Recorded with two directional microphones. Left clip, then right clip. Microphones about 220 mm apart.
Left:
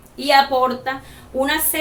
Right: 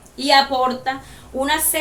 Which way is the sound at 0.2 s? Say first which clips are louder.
Left 1 dB; 5° right (ahead or behind).